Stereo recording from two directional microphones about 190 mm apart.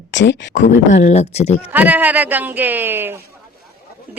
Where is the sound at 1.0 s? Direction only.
35° left (ahead or behind).